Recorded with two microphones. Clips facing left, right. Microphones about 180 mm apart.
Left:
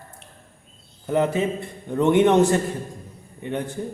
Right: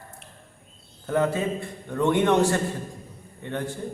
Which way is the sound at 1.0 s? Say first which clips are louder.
Left 2 dB; 20° left (ahead or behind).